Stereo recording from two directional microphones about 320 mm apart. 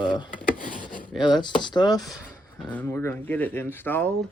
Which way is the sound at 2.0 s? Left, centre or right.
Centre.